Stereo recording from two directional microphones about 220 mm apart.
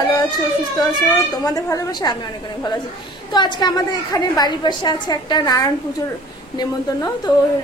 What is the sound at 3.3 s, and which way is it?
A woman's voice, 20° left (ahead or behind).